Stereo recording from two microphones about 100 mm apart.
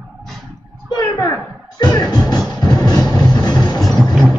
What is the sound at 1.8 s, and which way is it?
Music, 45° left (ahead or behind).